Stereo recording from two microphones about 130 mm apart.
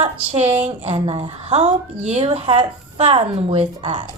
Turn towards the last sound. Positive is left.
turn(degrees=-40)  # may be behind; listen again after turning